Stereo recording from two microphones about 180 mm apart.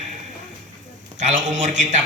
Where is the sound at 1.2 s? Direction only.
40° right (ahead or behind).